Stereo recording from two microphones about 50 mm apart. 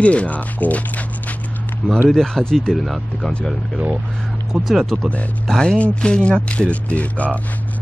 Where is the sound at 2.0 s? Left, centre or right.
Centre.